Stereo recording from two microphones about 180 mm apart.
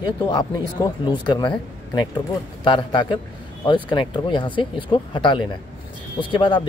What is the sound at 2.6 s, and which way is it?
Speech, 25° left (ahead or behind).